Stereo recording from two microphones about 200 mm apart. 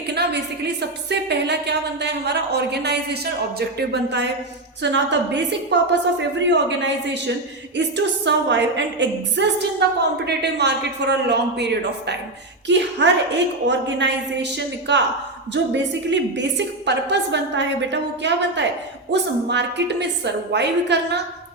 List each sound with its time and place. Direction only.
0.1 s a woman's voice: 55° right (ahead or behind)